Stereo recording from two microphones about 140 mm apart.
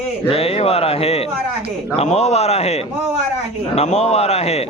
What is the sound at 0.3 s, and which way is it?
Speech, 45° left (ahead or behind).